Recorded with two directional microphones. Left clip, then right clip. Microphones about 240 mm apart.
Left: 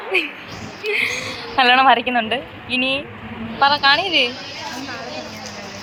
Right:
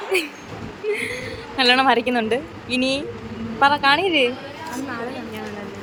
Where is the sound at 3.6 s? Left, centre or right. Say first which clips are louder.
Left 1 dB; centre.